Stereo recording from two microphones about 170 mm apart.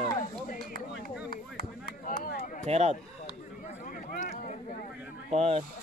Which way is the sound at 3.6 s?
50° left (ahead or behind).